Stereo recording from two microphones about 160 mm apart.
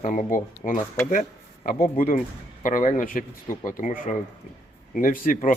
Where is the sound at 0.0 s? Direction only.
55° left (ahead or behind).